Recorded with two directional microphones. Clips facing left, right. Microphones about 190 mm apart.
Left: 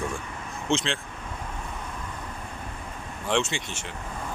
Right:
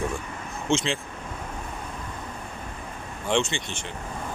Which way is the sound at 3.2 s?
5° left (ahead or behind).